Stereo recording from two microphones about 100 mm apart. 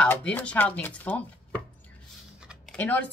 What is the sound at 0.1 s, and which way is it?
Speech, 15° left (ahead or behind).